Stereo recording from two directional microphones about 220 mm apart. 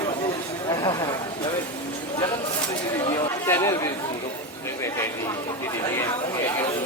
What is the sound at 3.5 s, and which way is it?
Speech, 10° left (ahead or behind).